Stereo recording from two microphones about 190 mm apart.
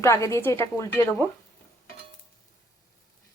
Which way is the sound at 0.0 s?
15° left (ahead or behind).